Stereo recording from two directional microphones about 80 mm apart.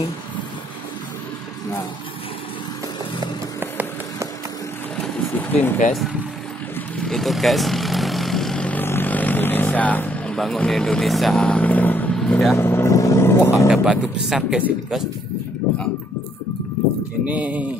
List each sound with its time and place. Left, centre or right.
4.9 s vehicle: centre
5.3 s vehicle: left
7.0 s vehicle: centre
8.6 s vehicle: left
10.3 s speech: centre
11.3 s vehicle: centre
12.2 s speech: centre
12.5 s speech: left
12.9 s vehicle: left
13.7 s speech: centre
17.3 s speech: centre